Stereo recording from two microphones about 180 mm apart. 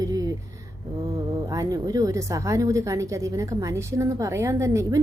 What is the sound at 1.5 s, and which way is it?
A woman's voice, 20° right (ahead or behind).